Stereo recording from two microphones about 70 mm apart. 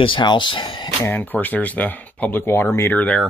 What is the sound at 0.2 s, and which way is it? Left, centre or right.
Speech, left.